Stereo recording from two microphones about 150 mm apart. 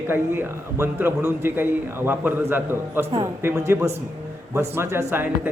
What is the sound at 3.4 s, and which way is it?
A man's voice, 20° right (ahead or behind).